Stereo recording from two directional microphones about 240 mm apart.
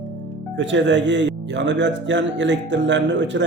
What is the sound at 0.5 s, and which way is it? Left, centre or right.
Speech, right.